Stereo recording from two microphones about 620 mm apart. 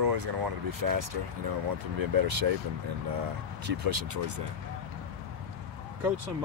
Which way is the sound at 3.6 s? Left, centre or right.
Right.